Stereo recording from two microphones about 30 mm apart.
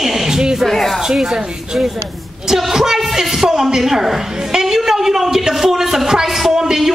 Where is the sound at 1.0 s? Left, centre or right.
Centre.